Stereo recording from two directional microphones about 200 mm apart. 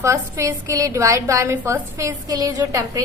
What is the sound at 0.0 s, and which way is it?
A woman's voice, 15° right (ahead or behind).